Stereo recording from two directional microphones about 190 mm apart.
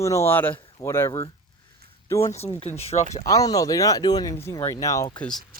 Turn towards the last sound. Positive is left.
turn(degrees=15)  # may be behind; listen again after turning